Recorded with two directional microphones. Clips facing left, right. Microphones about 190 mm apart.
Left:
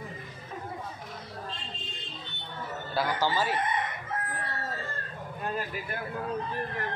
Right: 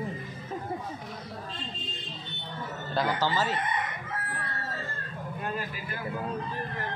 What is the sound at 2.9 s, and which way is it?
Speech, 10° left (ahead or behind).